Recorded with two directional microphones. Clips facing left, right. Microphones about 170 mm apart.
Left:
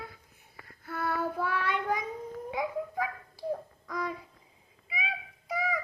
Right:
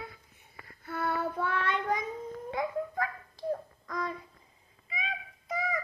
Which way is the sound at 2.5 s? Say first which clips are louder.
Right 1 dB; 10° left (ahead or behind).